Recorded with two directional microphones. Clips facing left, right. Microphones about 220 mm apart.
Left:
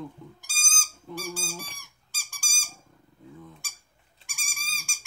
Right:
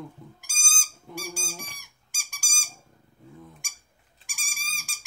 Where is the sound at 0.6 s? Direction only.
10° right (ahead or behind).